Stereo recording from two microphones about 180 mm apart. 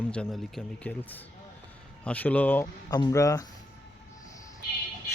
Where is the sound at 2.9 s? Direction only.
20° left (ahead or behind).